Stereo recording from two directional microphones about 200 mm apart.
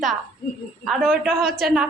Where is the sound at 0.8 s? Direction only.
Centre (ahead or behind).